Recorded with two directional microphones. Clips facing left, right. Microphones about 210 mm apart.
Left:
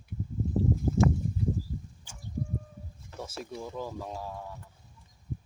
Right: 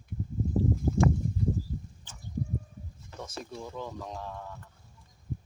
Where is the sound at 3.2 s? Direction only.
5° left (ahead or behind).